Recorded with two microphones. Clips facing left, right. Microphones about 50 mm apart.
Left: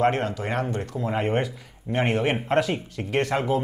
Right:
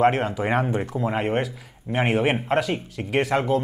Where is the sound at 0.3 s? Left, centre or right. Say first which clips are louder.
Right 4 dB; centre.